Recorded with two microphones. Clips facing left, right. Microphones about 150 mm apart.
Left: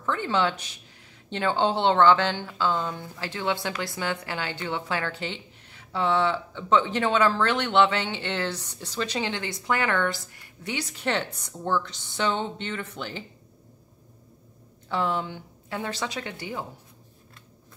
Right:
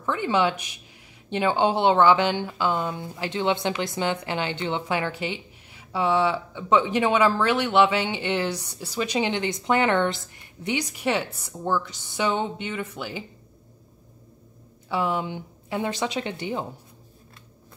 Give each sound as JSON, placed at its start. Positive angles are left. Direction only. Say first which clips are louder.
{"t": 0.0, "sound": "speech", "louder": "right 2 dB", "side_deg": -15}
{"t": 14.9, "sound": "speech", "louder": "right 2 dB", "side_deg": -10}